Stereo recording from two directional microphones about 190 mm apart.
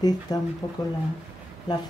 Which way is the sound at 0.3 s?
20° left (ahead or behind).